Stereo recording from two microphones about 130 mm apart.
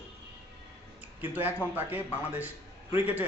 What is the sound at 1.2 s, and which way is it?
A man's voice, 15° right (ahead or behind).